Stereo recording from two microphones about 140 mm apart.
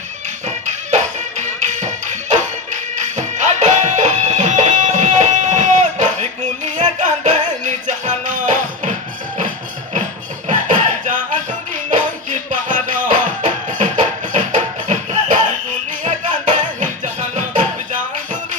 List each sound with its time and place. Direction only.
0.9 s music: 60° right (ahead or behind)
10.5 s music: 65° right (ahead or behind)